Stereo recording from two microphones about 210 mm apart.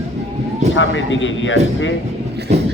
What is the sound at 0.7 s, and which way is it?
Speech, 65° left (ahead or behind).